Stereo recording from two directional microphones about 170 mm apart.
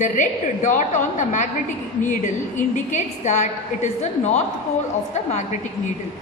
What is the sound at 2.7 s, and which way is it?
A woman's voice, 45° left (ahead or behind).